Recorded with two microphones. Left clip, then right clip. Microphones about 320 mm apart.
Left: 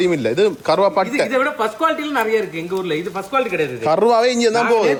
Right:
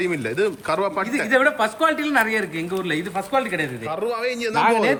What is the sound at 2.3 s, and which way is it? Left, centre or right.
Speech, centre.